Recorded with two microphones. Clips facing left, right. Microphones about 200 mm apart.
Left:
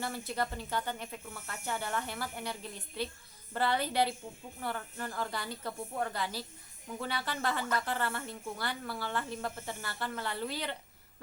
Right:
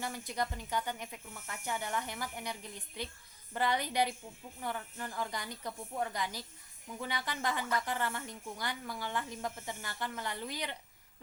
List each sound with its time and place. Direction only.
0.0 s a woman's voice: 15° right (ahead or behind)